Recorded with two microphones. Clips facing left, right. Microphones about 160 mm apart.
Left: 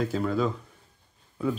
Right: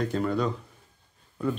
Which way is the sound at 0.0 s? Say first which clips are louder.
Even; centre (ahead or behind).